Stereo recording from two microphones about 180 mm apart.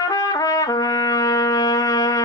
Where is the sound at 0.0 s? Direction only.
20° left (ahead or behind).